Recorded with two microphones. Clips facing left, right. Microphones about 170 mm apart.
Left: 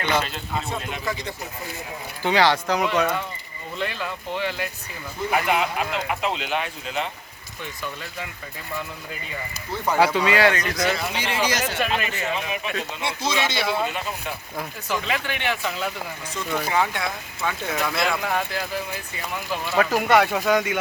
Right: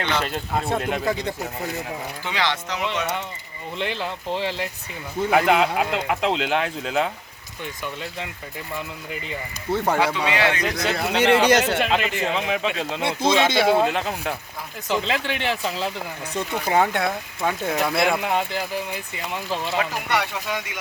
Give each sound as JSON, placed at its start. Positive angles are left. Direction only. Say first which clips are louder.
{"t": 0.3, "sound": "speech", "louder": "right 5 dB", "side_deg": -55}
{"t": 2.2, "sound": "speech", "louder": "left 8 dB", "side_deg": 35}
{"t": 3.8, "sound": "speech", "louder": "right 1 dB", "side_deg": -25}
{"t": 5.3, "sound": "speech", "louder": "right 4 dB", "side_deg": -90}
{"t": 9.7, "sound": "speech", "louder": "right 3 dB", "side_deg": -65}
{"t": 10.0, "sound": "speech", "louder": "left 3 dB", "side_deg": 40}
{"t": 10.9, "sound": "speech", "louder": "right 8 dB", "side_deg": -65}
{"t": 11.9, "sound": "speech", "louder": "right 3 dB", "side_deg": -90}
{"t": 13.0, "sound": "speech", "louder": "right 7 dB", "side_deg": -55}
{"t": 14.8, "sound": "speech", "louder": "right 4 dB", "side_deg": -25}
{"t": 16.6, "sound": "speech", "louder": "right 6 dB", "side_deg": -45}
{"t": 17.7, "sound": "speech", "louder": "right 3 dB", "side_deg": -25}
{"t": 19.8, "sound": "speech", "louder": "left 6 dB", "side_deg": 50}